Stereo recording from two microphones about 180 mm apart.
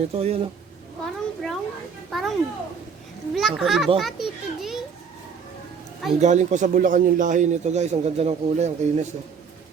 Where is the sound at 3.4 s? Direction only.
Centre (ahead or behind).